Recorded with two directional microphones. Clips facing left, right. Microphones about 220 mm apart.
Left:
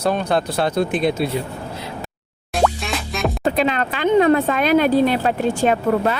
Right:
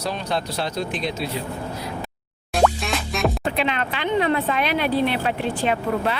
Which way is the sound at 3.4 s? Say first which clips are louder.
Left 5 dB; 40° left (ahead or behind).